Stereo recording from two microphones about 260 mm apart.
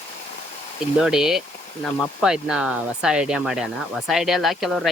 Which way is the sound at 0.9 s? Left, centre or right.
Centre.